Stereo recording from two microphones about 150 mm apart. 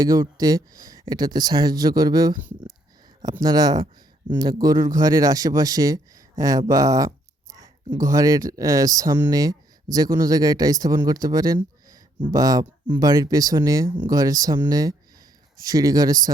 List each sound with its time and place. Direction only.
0.0 s speech: 25° right (ahead or behind)
3.4 s speech: 25° right (ahead or behind)